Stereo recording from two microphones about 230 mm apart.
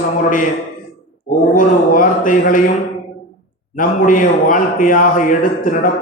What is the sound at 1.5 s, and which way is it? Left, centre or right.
A man's voice, left.